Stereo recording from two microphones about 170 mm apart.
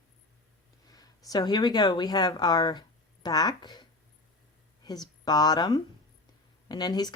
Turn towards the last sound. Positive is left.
turn(degrees=25)  # may be behind; listen again after turning